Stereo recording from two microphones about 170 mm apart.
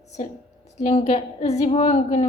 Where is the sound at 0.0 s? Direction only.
40° left (ahead or behind).